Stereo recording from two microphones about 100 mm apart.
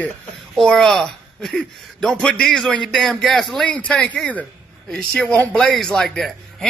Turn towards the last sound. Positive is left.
turn(degrees=5)  # may be behind; listen again after turning